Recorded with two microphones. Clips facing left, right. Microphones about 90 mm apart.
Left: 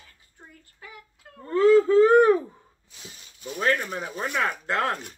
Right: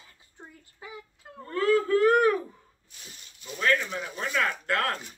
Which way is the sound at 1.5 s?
20° left (ahead or behind).